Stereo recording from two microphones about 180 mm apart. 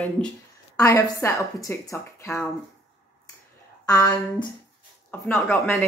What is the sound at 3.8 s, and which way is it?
Speech, 15° left (ahead or behind).